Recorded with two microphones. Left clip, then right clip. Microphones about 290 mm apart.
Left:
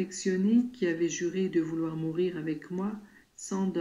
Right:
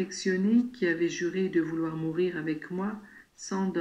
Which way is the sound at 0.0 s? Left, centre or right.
Centre.